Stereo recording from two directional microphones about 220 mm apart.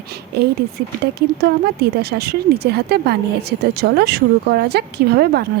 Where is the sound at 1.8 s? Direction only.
45° right (ahead or behind).